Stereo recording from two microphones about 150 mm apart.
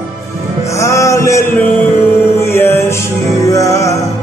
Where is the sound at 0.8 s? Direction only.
20° left (ahead or behind).